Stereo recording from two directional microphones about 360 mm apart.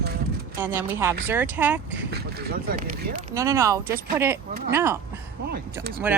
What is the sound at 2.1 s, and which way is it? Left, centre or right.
Speech, right.